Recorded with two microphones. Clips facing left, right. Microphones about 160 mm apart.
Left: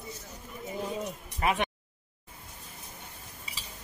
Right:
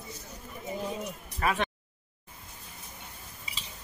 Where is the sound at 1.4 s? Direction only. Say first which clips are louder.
Left 1 dB; 20° left (ahead or behind).